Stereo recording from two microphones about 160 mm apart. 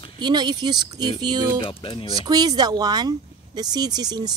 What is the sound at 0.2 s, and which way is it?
Speech, 25° right (ahead or behind).